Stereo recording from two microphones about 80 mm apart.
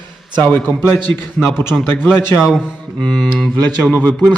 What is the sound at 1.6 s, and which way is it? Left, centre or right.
Speech, left.